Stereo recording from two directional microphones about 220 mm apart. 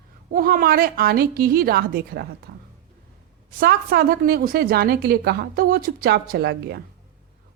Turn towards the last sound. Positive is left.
turn(degrees=-45)  # may be behind; listen again after turning